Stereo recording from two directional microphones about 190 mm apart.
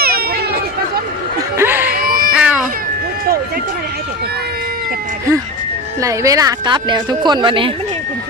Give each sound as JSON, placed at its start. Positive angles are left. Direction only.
{"t": 0.0, "sound": "run", "side_deg": -55}
{"t": 1.5, "sound": "music", "side_deg": -10}
{"t": 1.9, "sound": "a sound", "side_deg": -50}
{"t": 2.3, "sound": "cat", "side_deg": -5}
{"t": 6.0, "sound": "speech", "side_deg": -15}